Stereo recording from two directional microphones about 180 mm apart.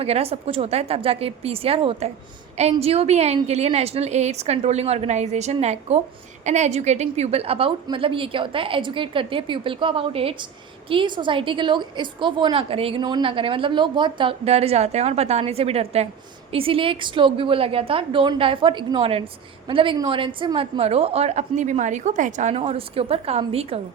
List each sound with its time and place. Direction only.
0.0 s a woman's voice: 35° right (ahead or behind)